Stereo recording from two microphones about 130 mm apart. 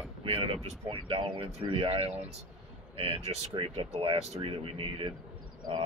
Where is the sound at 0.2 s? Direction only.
45° right (ahead or behind).